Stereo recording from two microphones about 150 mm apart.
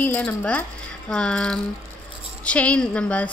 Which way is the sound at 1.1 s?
5° left (ahead or behind).